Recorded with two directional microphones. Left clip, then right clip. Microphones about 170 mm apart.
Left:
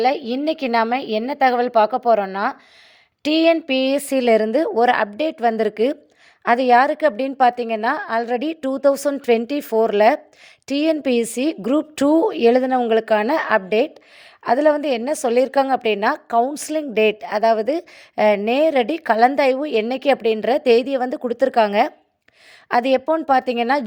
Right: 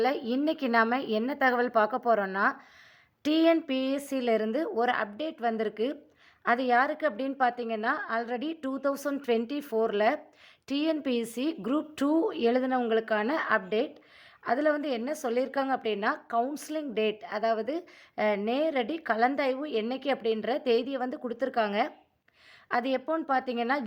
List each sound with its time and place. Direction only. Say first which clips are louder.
0.0 s a woman's voice: left 9 dB; 20° left (ahead or behind); by 23.8 s 40° left (ahead or behind)